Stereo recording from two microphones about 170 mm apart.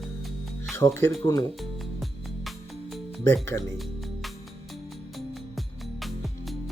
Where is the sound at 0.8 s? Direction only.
15° left (ahead or behind).